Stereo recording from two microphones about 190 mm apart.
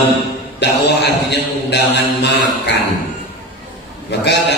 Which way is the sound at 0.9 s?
60° left (ahead or behind).